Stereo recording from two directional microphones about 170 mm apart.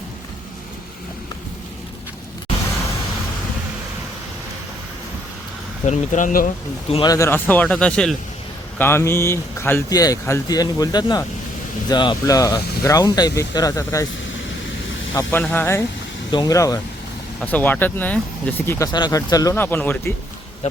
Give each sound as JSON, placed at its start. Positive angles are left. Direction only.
{"t": 5.8, "sound": "speech", "side_deg": 45}
{"t": 6.9, "sound": "speech", "side_deg": 25}
{"t": 15.1, "sound": "speech", "side_deg": 10}
{"t": 17.4, "sound": "speech", "side_deg": 10}